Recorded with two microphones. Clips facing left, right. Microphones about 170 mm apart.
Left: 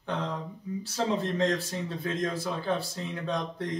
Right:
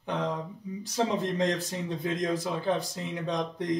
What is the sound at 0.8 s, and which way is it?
Speech, 15° right (ahead or behind).